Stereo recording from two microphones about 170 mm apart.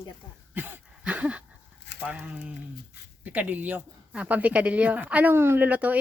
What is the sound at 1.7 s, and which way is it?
Dog, 90° left.